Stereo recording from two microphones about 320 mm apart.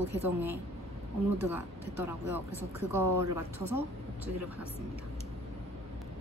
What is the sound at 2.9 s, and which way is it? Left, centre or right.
Speech, centre.